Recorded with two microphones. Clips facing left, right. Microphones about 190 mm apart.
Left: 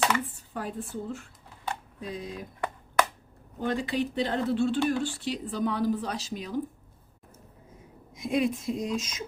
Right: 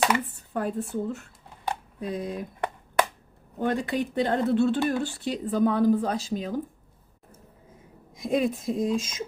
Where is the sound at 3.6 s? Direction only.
55° right (ahead or behind).